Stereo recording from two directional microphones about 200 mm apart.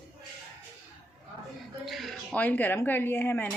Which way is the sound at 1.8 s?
Centre (ahead or behind).